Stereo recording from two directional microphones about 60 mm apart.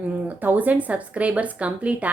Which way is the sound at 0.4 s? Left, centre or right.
Right.